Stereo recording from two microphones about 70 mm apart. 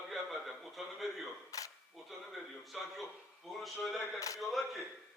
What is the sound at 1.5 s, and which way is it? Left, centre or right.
Single-lens reflex camera, left.